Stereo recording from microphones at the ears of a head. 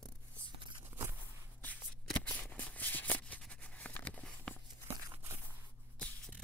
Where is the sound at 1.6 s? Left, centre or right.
Centre.